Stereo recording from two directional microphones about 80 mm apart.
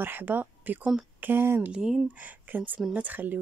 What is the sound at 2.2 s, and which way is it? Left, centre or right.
Speech, right.